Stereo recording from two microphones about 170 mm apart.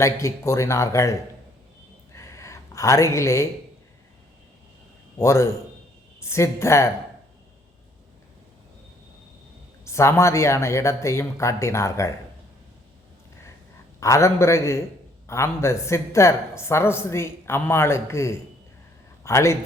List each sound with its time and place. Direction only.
0.0 s speech: 15° left (ahead or behind)
2.1 s a sound: 15° left (ahead or behind)
5.2 s speech: 15° left (ahead or behind)
9.8 s speech: 15° left (ahead or behind)
14.0 s a man's voice: 15° left (ahead or behind)